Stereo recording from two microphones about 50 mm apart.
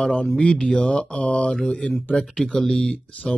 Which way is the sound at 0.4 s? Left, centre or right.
Left.